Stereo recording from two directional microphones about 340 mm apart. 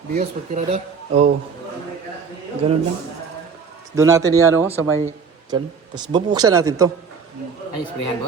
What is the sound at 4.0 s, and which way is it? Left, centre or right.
Speech, centre.